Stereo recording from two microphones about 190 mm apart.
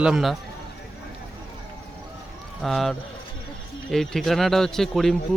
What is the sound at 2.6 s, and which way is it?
Speech, centre (ahead or behind).